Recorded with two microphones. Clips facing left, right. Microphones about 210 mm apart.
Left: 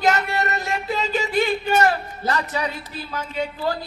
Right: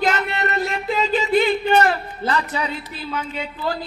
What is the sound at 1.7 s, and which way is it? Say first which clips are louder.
Speech: right 2 dB; 45° left (ahead or behind).